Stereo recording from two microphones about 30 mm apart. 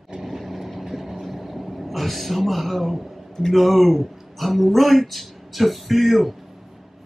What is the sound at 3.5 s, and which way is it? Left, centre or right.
Speech, centre.